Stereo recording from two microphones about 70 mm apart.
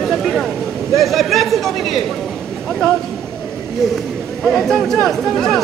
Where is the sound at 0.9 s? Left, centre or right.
Centre.